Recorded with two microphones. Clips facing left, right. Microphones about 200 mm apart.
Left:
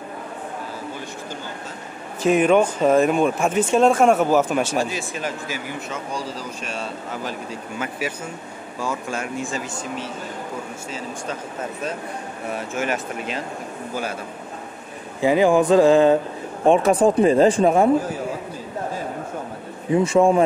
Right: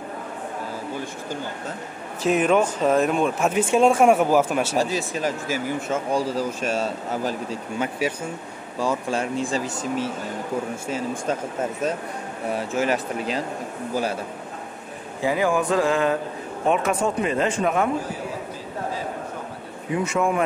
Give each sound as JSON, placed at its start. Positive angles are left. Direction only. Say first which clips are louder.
{"t": 2.2, "sound": "speech", "louder": "left 3 dB", "side_deg": 0}
{"t": 4.7, "sound": "speech", "louder": "right 1 dB", "side_deg": -35}
{"t": 8.8, "sound": "speech", "louder": "right 3 dB", "side_deg": -30}
{"t": 12.5, "sound": "speech", "louder": "right 2 dB", "side_deg": -30}
{"t": 15.2, "sound": "a sound", "louder": "left 6 dB", "side_deg": 25}
{"t": 16.6, "sound": "speech", "louder": "left 6 dB", "side_deg": 30}
{"t": 19.9, "sound": "a sound", "louder": "left 7 dB", "side_deg": 30}